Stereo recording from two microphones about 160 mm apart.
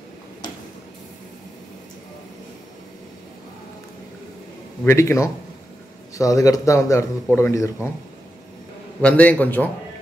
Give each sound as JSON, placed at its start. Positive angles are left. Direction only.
{"t": 4.8, "sound": "a man's voice", "side_deg": 15}
{"t": 9.0, "sound": "a man's voice", "side_deg": 10}